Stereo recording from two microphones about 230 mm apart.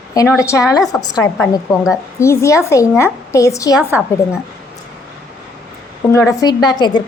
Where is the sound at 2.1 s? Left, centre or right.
Centre.